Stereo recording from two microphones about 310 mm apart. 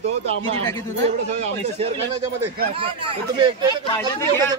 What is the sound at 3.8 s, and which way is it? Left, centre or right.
Speech, centre.